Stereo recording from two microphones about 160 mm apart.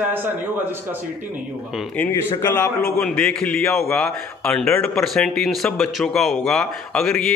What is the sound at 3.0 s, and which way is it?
A man's voice, centre (ahead or behind).